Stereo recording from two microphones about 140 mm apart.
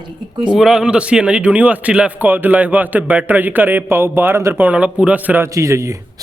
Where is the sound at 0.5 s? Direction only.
5° right (ahead or behind).